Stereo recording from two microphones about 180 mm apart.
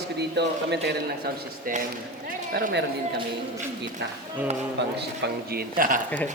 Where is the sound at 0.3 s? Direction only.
70° right (ahead or behind).